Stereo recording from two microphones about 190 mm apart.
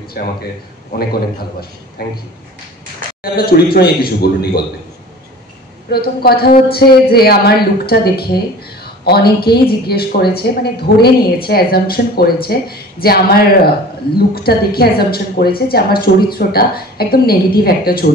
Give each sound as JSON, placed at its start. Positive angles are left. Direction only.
{"t": 0.2, "sound": "speech", "side_deg": 55}
{"t": 2.0, "sound": "speech", "side_deg": 55}
{"t": 3.3, "sound": "speech", "side_deg": 55}
{"t": 5.9, "sound": "a woman's voice", "side_deg": 55}